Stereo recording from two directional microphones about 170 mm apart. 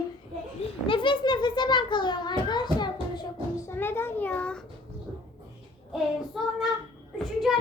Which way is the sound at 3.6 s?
15° left (ahead or behind).